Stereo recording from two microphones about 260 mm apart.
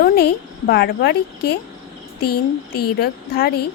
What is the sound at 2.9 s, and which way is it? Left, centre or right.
Speech, left.